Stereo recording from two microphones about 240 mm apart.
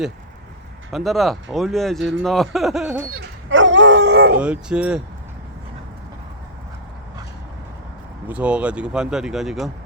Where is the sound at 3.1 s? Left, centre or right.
Right.